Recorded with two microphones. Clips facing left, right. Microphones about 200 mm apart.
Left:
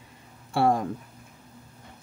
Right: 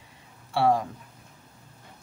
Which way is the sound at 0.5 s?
50° left (ahead or behind).